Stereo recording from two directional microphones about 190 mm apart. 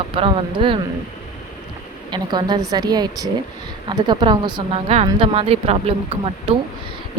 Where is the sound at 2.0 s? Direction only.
25° right (ahead or behind).